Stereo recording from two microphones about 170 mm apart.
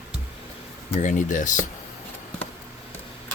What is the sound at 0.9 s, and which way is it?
Speech, 45° left (ahead or behind).